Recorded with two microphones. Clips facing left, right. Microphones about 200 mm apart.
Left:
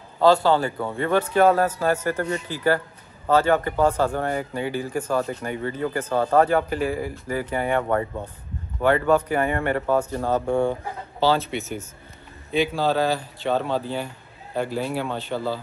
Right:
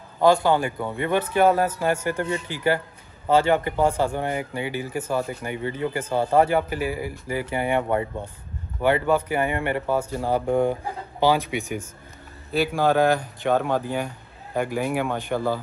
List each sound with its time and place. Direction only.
0.2 s a man's voice: 15° right (ahead or behind)